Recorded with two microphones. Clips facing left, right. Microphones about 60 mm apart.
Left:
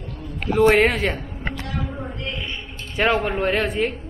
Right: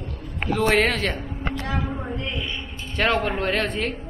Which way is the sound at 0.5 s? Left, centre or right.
Centre.